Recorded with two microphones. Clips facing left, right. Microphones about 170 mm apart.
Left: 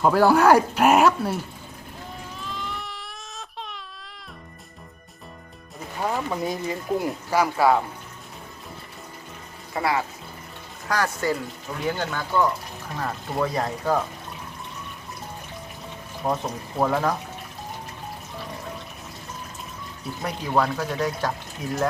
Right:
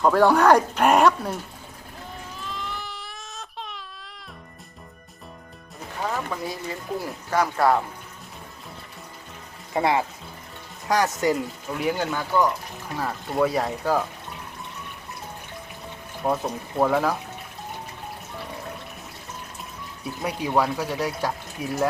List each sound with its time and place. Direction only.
0.0 s speech: 5° left (ahead or behind)
2.4 s baby cry: centre (ahead or behind)
6.0 s speech: 15° left (ahead or behind)
9.7 s speech: 25° right (ahead or behind); by 14.0 s 5° right (ahead or behind)
16.2 s speech: 5° right (ahead or behind)
20.2 s speech: 10° right (ahead or behind)